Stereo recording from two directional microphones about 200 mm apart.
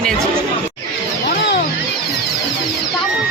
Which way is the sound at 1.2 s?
55° left (ahead or behind).